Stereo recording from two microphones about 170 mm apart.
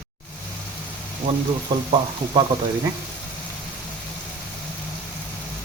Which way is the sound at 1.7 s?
30° right (ahead or behind).